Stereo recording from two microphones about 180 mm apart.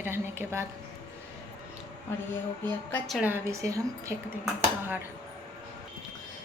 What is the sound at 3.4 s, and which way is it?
Speech, 15° right (ahead or behind).